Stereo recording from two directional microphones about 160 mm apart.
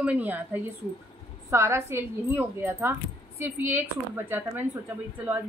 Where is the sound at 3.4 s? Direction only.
15° right (ahead or behind).